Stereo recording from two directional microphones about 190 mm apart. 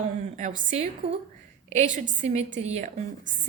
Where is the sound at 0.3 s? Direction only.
40° right (ahead or behind).